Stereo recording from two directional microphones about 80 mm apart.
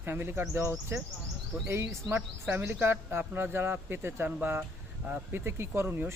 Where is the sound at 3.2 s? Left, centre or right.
Centre.